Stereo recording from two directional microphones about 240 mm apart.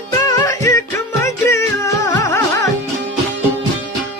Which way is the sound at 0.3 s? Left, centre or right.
Centre.